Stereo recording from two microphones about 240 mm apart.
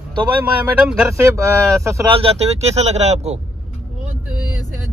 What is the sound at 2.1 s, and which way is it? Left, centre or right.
Speech, right.